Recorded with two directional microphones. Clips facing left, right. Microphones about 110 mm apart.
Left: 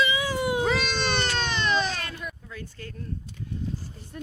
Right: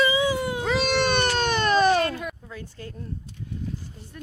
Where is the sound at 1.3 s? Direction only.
50° right (ahead or behind).